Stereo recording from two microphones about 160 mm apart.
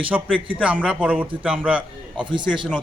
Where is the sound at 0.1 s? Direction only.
5° right (ahead or behind).